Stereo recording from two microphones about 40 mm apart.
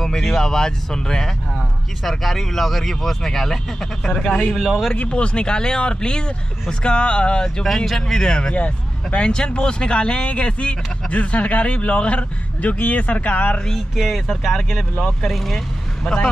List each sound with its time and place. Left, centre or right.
0.0 s speech: centre
4.6 s speech: centre
4.9 s speech: left
7.6 s speech: centre
8.1 s speech: centre
8.5 s speech: left
13.9 s speech: centre